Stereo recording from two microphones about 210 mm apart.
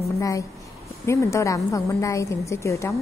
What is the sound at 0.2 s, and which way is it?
A woman's voice, 15° left (ahead or behind).